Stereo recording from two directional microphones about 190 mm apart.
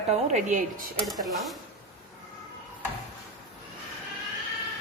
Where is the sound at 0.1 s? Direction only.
35° right (ahead or behind).